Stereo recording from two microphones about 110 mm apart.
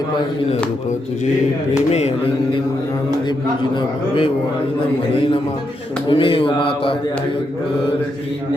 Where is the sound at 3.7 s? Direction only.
50° left (ahead or behind).